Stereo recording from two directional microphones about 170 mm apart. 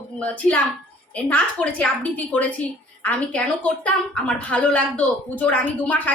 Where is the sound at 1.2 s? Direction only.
10° left (ahead or behind).